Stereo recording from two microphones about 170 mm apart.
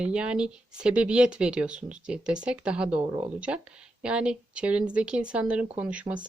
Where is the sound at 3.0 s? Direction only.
30° right (ahead or behind).